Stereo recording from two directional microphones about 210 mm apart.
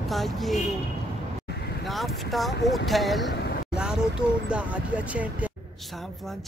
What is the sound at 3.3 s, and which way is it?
Vehicle, 50° left (ahead or behind).